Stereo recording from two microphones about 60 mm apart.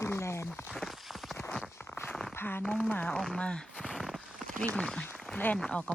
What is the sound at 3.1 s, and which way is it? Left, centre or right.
Speech, centre.